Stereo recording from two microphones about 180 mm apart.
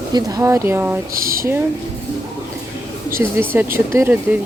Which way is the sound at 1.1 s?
55° right (ahead or behind).